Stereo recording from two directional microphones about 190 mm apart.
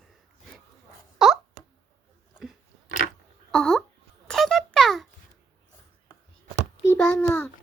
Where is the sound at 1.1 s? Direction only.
Centre (ahead or behind).